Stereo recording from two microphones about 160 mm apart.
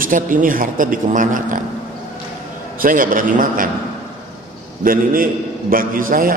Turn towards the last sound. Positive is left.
turn(degrees=-60)  # may be behind; listen again after turning